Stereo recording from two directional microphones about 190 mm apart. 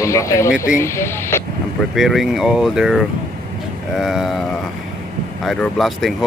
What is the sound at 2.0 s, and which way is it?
Speech, centre (ahead or behind).